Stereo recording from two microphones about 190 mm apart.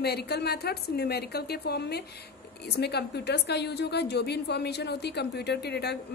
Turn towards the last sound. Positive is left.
turn(degrees=60)  # may be behind; listen again after turning